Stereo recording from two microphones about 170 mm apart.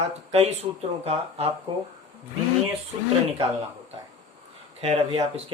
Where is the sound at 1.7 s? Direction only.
25° right (ahead or behind).